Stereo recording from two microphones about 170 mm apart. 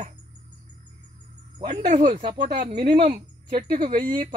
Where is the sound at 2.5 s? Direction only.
65° right (ahead or behind).